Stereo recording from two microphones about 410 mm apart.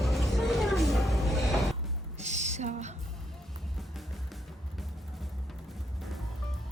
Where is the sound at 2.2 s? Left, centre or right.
Centre.